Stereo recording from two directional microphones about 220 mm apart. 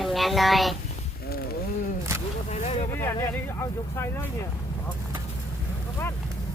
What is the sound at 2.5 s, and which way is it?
Vehicle, 30° left (ahead or behind).